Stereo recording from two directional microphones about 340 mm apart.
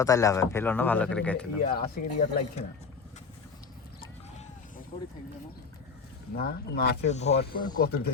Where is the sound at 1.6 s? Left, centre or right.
Left.